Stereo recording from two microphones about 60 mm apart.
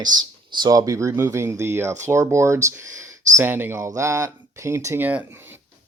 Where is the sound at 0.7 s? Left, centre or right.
Right.